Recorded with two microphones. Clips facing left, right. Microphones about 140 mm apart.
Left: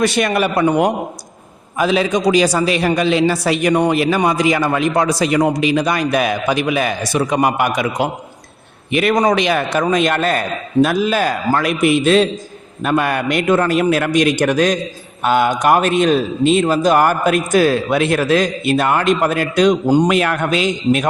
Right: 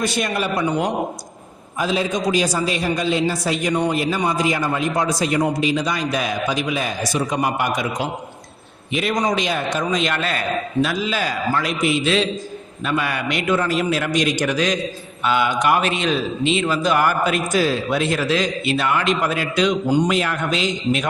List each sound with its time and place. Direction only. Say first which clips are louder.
0.0 s a man's voice: left 6 dB; 75° left (ahead or behind)
1.8 s a man's voice: left 6 dB; 75° left (ahead or behind); by 20.1 s 45° left (ahead or behind)
20.1 s a man's voice: left 5 dB; 60° left (ahead or behind)